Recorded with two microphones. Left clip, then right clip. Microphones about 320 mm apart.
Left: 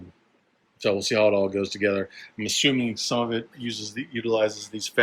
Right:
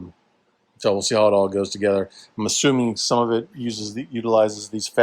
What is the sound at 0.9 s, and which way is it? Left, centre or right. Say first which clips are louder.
Speech: right 4 dB; centre.